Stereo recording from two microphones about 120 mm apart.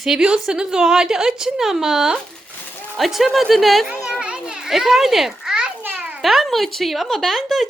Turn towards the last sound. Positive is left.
turn(degrees=0)  # may be behind; listen again after turning